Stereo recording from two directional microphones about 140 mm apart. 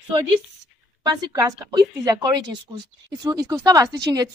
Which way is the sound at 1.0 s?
30° right (ahead or behind).